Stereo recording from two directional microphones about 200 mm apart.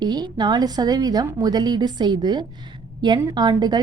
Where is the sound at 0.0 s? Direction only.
20° right (ahead or behind).